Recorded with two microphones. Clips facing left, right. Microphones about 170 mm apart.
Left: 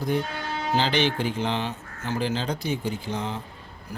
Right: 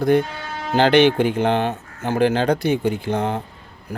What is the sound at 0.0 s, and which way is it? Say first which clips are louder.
Speech: right 9 dB; 65° right (ahead or behind).